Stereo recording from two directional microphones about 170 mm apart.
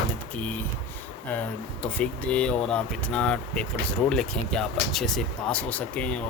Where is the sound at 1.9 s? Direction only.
5° left (ahead or behind).